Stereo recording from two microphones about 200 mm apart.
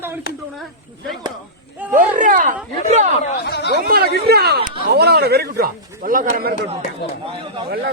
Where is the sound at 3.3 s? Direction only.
55° left (ahead or behind).